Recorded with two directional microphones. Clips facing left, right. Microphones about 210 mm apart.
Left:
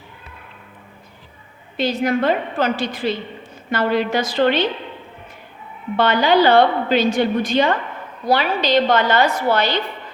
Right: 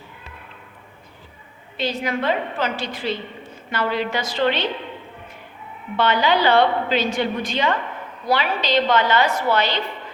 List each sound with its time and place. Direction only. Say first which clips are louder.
1.7 s a woman's voice: left 5 dB; 45° left (ahead or behind)
6.0 s a woman's voice: left 4 dB; 40° left (ahead or behind)